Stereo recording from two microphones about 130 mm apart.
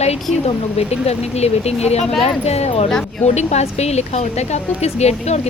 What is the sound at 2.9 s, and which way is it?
Speech, 5° left (ahead or behind).